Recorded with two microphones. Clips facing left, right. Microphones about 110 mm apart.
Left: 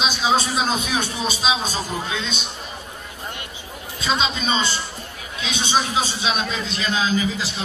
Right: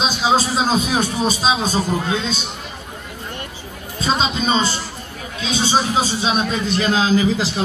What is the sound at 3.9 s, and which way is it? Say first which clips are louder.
Speech: right 3 dB; 35° right (ahead or behind).